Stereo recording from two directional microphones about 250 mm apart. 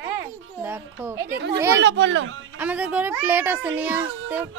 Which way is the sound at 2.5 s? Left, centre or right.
Centre.